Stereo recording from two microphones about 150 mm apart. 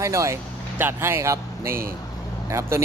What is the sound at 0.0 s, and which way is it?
A man's voice, 20° right (ahead or behind).